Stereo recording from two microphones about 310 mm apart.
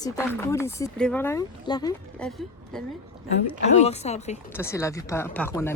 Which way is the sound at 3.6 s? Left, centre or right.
Left.